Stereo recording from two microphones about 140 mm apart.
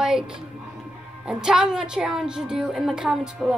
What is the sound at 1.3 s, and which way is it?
A child's voice, 5° right (ahead or behind).